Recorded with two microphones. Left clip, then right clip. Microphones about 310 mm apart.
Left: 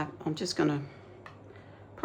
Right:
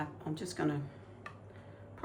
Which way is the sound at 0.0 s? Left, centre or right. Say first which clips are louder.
Left 6 dB; left.